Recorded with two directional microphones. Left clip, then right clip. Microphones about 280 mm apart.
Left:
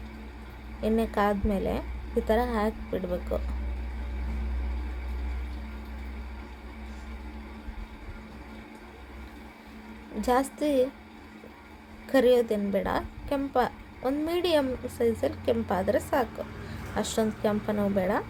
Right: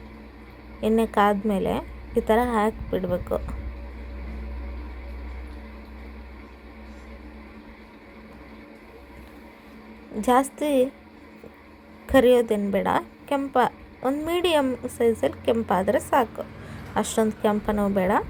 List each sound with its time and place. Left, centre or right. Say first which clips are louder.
0.8 s a woman's voice: right 6 dB; centre
10.6 s a woman's voice: right 3 dB; centre
12.0 s a woman's voice: right 4 dB; centre